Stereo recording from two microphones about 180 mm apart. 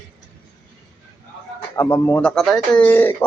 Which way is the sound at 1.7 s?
15° left (ahead or behind).